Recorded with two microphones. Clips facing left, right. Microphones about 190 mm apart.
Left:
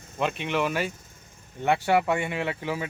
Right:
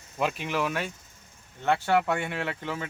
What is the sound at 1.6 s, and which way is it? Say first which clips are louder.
Speech: left 2 dB; 15° left (ahead or behind).